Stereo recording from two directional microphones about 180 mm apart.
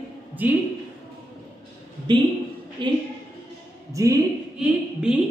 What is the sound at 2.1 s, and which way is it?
A man's voice, 25° right (ahead or behind).